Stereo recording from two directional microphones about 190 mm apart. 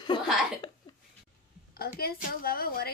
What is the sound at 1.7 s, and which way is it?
A woman's voice, 55° left (ahead or behind).